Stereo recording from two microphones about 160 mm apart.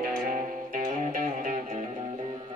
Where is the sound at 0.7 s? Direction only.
55° right (ahead or behind).